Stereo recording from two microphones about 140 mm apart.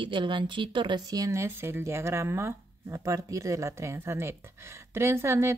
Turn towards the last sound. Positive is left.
turn(degrees=-20)  # may be behind; listen again after turning